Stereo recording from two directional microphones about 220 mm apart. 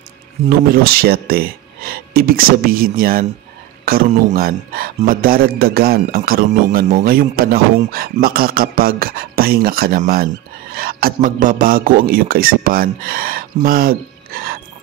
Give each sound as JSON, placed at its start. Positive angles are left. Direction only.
{"t": 0.5, "sound": "speech", "side_deg": -40}